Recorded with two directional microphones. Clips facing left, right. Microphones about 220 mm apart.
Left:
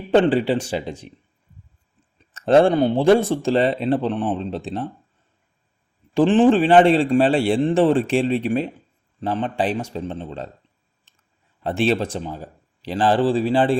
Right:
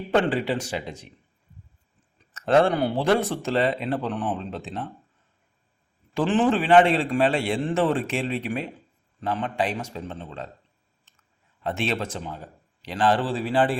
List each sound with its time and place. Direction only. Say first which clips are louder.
0.1 s a man's voice: left 6 dB; 30° left (ahead or behind)
2.3 s speech: left 5 dB; 30° left (ahead or behind)
6.1 s a man's voice: left 7 dB; 30° left (ahead or behind)
11.6 s a man's voice: left 7 dB; 35° left (ahead or behind)